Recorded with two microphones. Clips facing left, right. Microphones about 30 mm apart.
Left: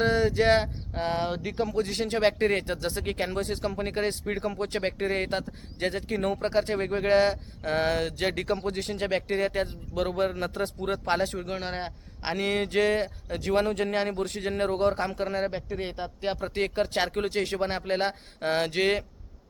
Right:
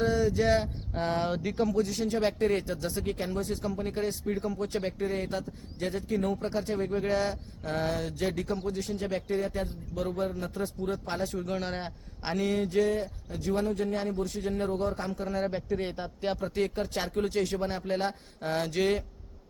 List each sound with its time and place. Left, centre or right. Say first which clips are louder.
0.0 s speech: left 3 dB; left
0.9 s a man's voice: left 1 dB; centre
1.8 s speech: left 3 dB; left
11.3 s a man's voice: left 1 dB; left
12.5 s speech: left 3 dB; left
15.4 s a man's voice: even; left
16.4 s speech: left 5 dB; left